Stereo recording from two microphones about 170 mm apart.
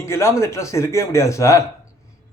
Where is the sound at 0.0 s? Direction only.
15° left (ahead or behind).